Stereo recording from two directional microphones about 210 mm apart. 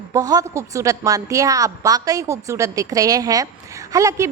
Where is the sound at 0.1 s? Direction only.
15° right (ahead or behind).